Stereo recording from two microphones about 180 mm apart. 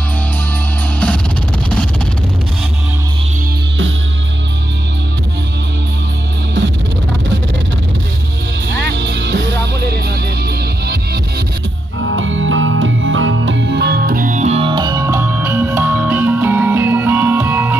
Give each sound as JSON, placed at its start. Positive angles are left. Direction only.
{"t": 8.6, "sound": "music", "side_deg": -75}
{"t": 12.0, "sound": "music", "side_deg": -90}